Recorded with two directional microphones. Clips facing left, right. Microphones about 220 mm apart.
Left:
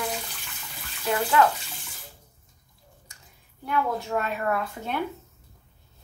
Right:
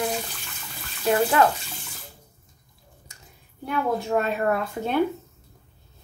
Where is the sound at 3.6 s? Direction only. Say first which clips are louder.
Right 2 dB; 25° right (ahead or behind).